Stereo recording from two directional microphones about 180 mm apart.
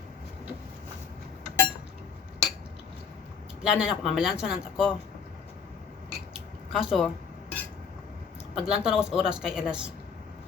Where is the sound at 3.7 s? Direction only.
Centre (ahead or behind).